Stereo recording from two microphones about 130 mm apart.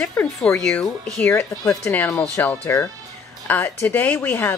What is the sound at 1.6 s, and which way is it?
A woman's voice, 20° left (ahead or behind).